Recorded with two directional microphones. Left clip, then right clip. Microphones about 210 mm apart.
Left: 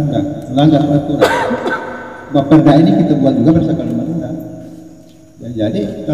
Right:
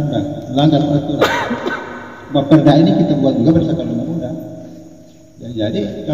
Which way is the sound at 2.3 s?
Centre (ahead or behind).